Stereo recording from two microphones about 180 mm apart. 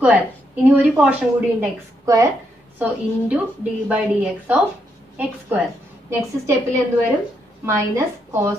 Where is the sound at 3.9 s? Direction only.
5° right (ahead or behind).